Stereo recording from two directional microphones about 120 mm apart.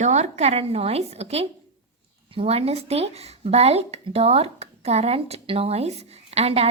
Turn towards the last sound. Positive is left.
turn(degrees=-60)  # may be behind; listen again after turning